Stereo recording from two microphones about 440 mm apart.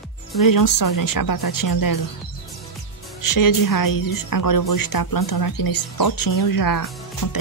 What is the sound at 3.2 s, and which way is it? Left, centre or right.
A woman's voice, left.